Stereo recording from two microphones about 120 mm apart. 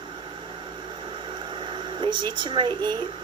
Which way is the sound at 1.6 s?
40° right (ahead or behind).